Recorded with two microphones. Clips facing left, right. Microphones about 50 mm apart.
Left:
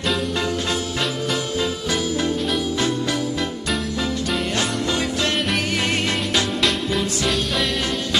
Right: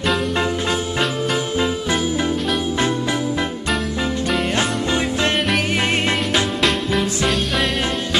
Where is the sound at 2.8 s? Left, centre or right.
Right.